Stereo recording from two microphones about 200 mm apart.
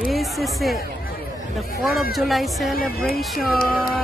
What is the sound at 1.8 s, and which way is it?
Speech, centre (ahead or behind).